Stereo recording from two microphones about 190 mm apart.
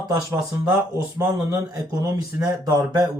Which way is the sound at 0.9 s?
15° right (ahead or behind).